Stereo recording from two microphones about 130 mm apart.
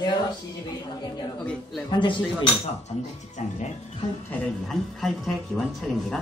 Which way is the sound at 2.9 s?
60° left (ahead or behind).